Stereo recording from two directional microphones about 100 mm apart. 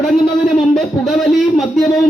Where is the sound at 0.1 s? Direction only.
Centre (ahead or behind).